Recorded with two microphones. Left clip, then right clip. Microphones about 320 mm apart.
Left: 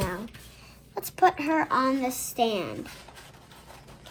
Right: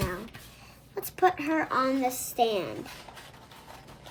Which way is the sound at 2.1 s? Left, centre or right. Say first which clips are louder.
Left 1 dB; right.